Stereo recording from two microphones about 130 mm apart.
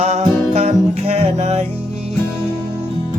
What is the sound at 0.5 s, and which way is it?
Music, 55° right (ahead or behind).